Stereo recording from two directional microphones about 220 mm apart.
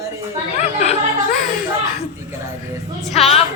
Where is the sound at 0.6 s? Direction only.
30° left (ahead or behind).